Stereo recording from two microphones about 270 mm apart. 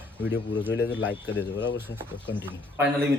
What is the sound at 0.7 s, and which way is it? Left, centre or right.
Speech, left.